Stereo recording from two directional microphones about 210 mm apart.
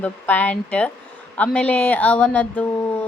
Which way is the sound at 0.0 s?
10° left (ahead or behind).